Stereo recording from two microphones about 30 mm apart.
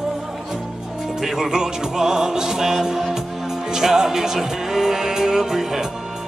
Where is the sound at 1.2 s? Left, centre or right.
Centre.